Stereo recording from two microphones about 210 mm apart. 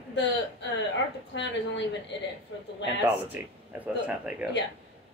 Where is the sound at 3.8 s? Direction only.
5° right (ahead or behind).